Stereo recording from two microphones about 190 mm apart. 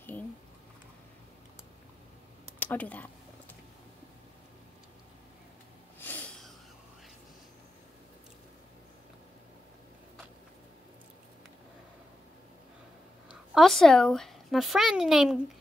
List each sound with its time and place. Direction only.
2.6 s speech: 10° left (ahead or behind)
5.9 s snort: 10° left (ahead or behind)
13.3 s speech: centre (ahead or behind)